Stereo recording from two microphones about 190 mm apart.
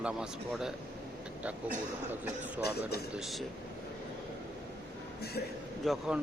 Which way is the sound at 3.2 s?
Centre (ahead or behind).